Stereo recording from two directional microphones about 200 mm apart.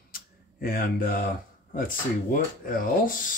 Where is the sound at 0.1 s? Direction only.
45° left (ahead or behind).